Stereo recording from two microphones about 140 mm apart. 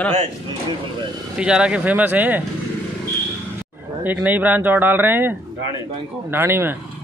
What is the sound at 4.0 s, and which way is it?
Speech, 10° right (ahead or behind).